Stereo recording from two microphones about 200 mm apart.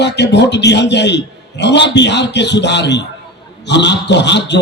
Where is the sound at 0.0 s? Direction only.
60° left (ahead or behind).